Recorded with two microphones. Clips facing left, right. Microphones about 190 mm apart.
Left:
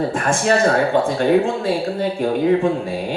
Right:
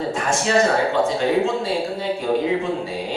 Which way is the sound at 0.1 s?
55° left (ahead or behind).